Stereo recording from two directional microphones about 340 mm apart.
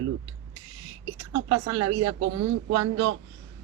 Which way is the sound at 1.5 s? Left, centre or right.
Right.